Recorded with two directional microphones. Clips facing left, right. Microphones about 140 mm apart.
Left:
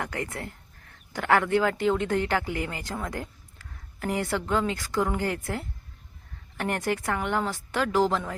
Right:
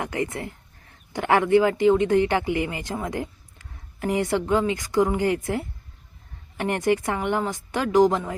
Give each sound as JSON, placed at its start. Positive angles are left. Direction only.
{"t": 0.0, "sound": "speech", "side_deg": -15}
{"t": 6.6, "sound": "speech", "side_deg": -15}